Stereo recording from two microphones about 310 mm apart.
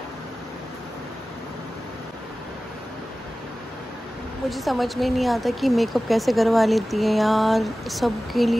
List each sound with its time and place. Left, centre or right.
4.5 s speech: centre